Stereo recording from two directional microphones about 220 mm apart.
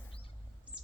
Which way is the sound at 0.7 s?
5° right (ahead or behind).